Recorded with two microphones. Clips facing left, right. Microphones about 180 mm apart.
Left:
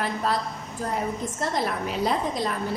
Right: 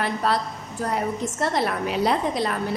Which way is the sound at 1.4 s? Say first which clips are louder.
Right 3 dB; 70° right (ahead or behind).